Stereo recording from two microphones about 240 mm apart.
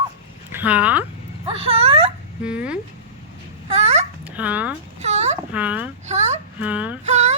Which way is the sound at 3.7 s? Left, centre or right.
Right.